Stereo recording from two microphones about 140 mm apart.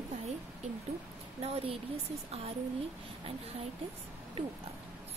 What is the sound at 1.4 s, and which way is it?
Speech, 45° right (ahead or behind).